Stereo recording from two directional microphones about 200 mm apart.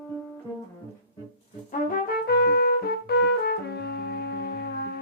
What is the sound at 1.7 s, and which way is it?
Music, 40° left (ahead or behind).